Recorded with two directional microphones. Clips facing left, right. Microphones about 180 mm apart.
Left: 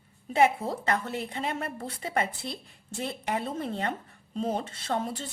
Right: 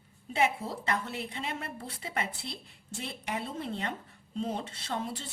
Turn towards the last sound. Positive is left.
turn(degrees=50)  # may be behind; listen again after turning